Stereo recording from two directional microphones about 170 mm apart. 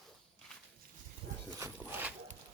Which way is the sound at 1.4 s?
15° right (ahead or behind).